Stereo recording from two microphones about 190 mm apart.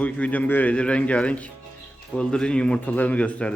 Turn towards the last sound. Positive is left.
turn(degrees=5)  # may be behind; listen again after turning